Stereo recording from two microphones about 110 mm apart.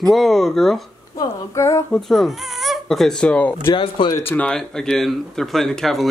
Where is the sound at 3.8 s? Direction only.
50° left (ahead or behind).